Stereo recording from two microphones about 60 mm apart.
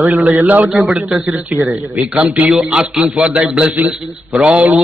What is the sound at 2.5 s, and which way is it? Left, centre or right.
Speech, centre.